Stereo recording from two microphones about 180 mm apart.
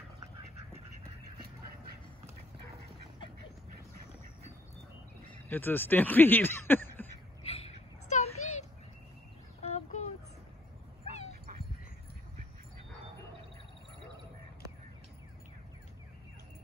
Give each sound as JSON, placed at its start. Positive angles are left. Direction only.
{"t": 5.3, "sound": "speech", "side_deg": 10}
{"t": 7.4, "sound": "a sound", "side_deg": 35}
{"t": 9.6, "sound": "chicken", "side_deg": 35}